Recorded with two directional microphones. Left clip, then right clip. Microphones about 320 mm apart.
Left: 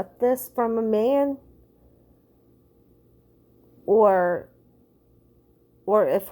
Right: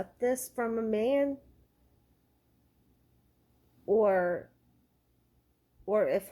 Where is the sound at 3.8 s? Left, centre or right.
Centre.